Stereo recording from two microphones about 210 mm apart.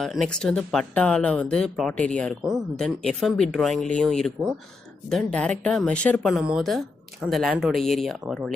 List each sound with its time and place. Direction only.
0.0 s speech: centre (ahead or behind)